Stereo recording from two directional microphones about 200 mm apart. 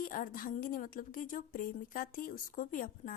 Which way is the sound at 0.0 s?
40° left (ahead or behind).